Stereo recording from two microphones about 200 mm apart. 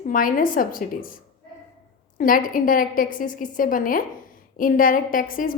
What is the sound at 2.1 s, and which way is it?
A woman's voice, 45° left (ahead or behind).